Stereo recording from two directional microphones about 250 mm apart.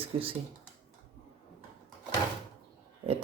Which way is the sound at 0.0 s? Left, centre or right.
Right.